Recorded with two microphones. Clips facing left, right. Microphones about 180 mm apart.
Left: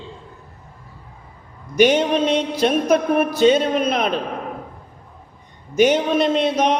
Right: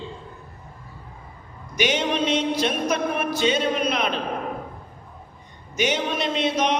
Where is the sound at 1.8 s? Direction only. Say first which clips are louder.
Left 7 dB; 35° left (ahead or behind).